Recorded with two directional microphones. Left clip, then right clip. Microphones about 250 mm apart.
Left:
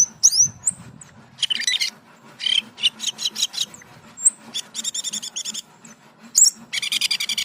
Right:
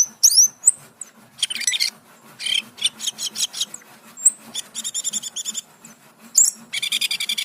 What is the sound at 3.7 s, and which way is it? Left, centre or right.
Dog, right.